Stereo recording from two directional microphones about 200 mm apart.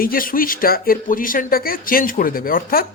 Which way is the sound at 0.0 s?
45° left (ahead or behind).